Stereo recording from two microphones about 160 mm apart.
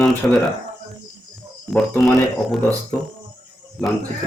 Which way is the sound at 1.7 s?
Centre (ahead or behind).